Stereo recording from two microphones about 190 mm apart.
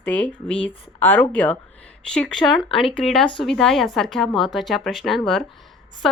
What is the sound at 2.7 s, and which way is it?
Speech, 30° left (ahead or behind).